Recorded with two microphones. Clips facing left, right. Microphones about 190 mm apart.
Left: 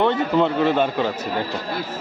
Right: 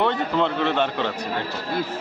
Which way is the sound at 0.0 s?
5° left (ahead or behind).